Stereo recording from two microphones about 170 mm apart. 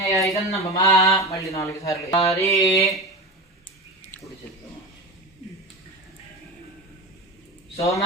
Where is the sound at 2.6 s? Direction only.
20° left (ahead or behind).